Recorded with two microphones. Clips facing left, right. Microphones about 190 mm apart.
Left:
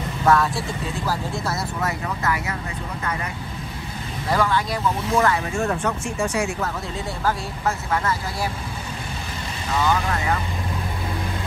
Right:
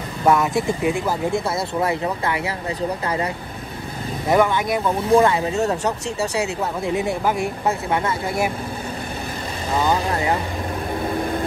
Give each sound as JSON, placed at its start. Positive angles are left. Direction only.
{"t": 0.2, "sound": "speech", "side_deg": -20}
{"t": 4.3, "sound": "speech", "side_deg": -20}
{"t": 6.9, "sound": "speech", "side_deg": -20}
{"t": 9.7, "sound": "speech", "side_deg": -30}